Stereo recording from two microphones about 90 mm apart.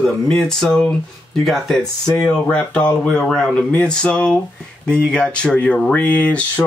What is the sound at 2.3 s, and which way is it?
Speech, 10° left (ahead or behind).